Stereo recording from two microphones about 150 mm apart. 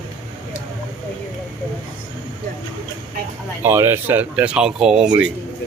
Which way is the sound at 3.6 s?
15° right (ahead or behind).